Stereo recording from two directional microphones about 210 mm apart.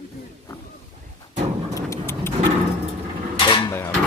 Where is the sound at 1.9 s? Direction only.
10° left (ahead or behind).